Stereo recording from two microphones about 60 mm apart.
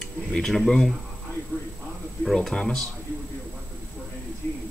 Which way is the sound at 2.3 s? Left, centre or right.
Centre.